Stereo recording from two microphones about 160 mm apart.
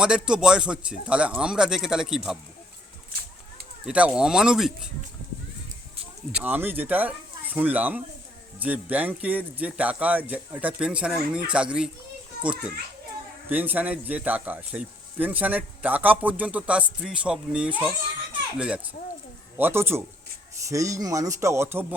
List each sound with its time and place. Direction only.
0.0 s a man's voice: 5° right (ahead or behind)
3.8 s a man's voice: 5° right (ahead or behind)
6.3 s speech: 10° right (ahead or behind)